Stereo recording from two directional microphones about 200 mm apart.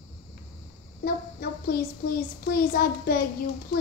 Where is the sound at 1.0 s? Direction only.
50° left (ahead or behind).